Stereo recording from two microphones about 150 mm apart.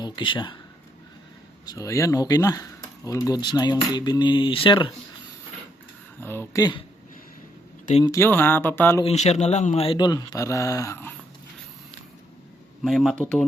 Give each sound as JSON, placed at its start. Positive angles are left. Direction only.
{"t": 0.0, "sound": "speech", "side_deg": 30}
{"t": 1.6, "sound": "speech", "side_deg": 20}
{"t": 6.1, "sound": "speech", "side_deg": 15}
{"t": 8.0, "sound": "speech", "side_deg": 20}
{"t": 9.0, "sound": "speech", "side_deg": 45}
{"t": 12.8, "sound": "speech", "side_deg": 0}